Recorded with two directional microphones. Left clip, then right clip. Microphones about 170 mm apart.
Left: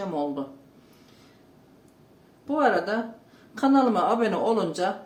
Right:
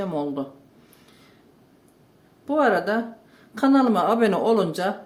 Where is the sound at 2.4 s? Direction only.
55° right (ahead or behind).